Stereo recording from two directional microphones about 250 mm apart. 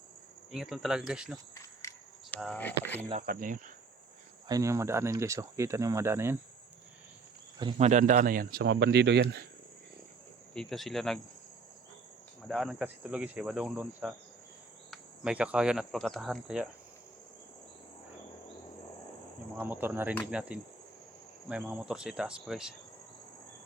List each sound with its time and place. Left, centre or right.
0.5 s cricket: centre
1.8 s a sound: centre
2.3 s speech: centre
3.1 s speech: right
4.4 s speech: centre
7.6 s speech: right
10.5 s cricket: centre
12.5 s cricket: centre
14.8 s speech: centre
19.5 s speech: centre
20.1 s cricket: centre